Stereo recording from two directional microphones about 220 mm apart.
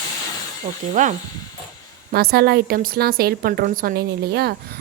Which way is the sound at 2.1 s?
45° right (ahead or behind).